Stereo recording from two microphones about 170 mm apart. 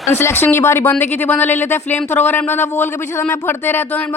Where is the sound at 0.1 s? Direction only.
15° left (ahead or behind).